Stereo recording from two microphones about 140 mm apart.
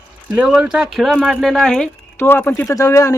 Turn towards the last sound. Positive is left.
turn(degrees=25)  # may be behind; listen again after turning